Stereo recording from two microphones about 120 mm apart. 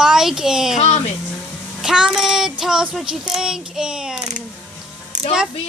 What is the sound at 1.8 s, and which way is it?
Child singing, 5° right (ahead or behind).